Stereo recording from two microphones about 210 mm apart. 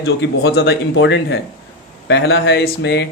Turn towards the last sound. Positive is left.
turn(degrees=55)  # may be behind; listen again after turning